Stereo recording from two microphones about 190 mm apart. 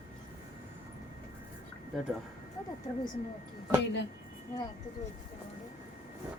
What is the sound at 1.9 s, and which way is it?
Speech, centre (ahead or behind).